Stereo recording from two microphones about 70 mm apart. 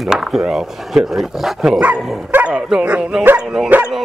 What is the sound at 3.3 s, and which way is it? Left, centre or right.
Speech, centre.